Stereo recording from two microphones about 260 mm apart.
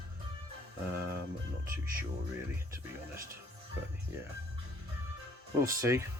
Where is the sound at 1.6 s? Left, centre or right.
Right.